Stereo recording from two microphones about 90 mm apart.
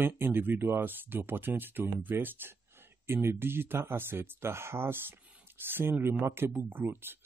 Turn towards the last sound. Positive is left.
turn(degrees=-25)  # may be behind; listen again after turning